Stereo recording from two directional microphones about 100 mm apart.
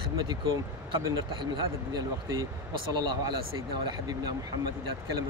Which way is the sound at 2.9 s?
45° right (ahead or behind).